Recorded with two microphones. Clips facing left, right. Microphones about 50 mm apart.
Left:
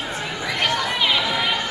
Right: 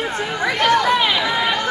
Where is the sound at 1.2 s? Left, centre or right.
Right.